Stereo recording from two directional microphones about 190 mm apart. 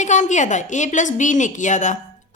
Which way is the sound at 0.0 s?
40° left (ahead or behind).